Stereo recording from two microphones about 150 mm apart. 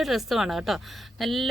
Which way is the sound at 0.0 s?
Centre (ahead or behind).